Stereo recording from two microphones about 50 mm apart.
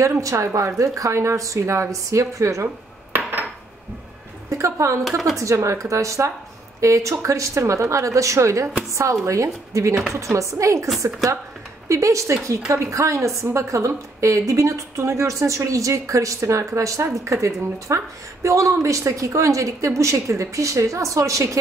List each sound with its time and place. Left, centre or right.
0.0 s a woman's voice: right
4.6 s speech: right
5.0 s speech: centre
5.4 s a woman's voice: right
10.1 s a woman's voice: right
11.9 s a woman's voice: right